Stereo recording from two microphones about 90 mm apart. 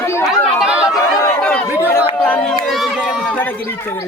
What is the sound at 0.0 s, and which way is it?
Chatter, 30° left (ahead or behind).